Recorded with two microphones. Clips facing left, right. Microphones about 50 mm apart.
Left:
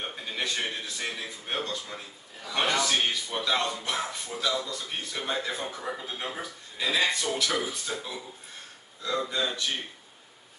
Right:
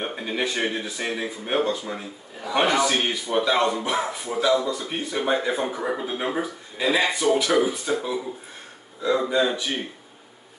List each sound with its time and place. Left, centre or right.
0.0 s a man's voice: right
5.8 s a man's voice: right
9.3 s a man's voice: centre